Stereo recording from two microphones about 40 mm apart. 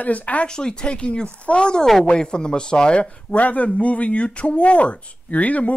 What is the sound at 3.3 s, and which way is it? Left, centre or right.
Speech, left.